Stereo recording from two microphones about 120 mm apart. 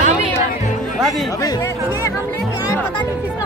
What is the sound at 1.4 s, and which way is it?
Speech, 30° left (ahead or behind).